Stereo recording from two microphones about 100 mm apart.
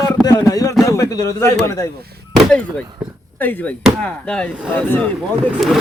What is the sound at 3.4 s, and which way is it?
Speech, 20° left (ahead or behind).